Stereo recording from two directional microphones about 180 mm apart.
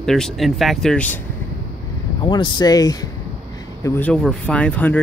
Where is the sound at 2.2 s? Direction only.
25° left (ahead or behind).